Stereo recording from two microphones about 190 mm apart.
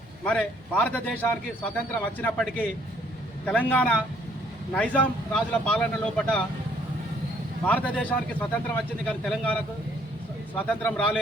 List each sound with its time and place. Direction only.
0.3 s a man's voice: 5° left (ahead or behind)
7.6 s a man's voice: 5° left (ahead or behind)